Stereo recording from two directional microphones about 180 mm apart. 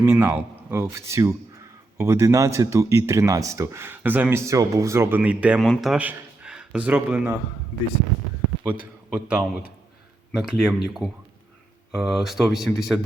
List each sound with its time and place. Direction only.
0.0 s speech: 10° right (ahead or behind)
8.7 s a man's voice: 10° left (ahead or behind)
9.1 s speech: 5° right (ahead or behind)